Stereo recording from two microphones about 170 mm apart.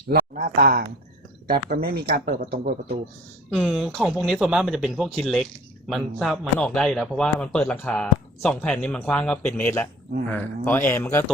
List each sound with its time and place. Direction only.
0.1 s speech: 60° right (ahead or behind)
3.5 s speech: centre (ahead or behind); by 11.3 s 15° left (ahead or behind)